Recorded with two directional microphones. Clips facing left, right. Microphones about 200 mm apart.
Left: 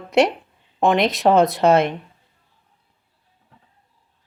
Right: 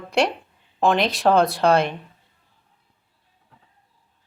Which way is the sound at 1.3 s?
20° left (ahead or behind).